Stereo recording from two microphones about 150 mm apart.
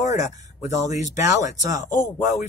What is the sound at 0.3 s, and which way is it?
Speech, 50° left (ahead or behind).